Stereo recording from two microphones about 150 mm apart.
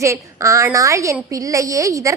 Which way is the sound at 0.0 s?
20° right (ahead or behind).